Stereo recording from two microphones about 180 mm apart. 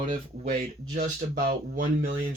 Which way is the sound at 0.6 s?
50° right (ahead or behind).